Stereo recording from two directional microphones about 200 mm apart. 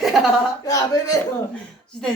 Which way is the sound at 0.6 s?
15° left (ahead or behind).